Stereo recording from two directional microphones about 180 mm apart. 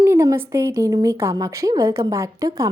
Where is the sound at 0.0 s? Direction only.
15° right (ahead or behind).